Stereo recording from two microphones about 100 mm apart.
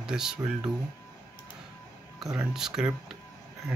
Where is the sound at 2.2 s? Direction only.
5° right (ahead or behind).